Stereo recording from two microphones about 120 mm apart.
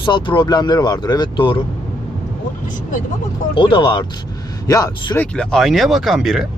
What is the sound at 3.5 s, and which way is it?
Speech, 45° left (ahead or behind).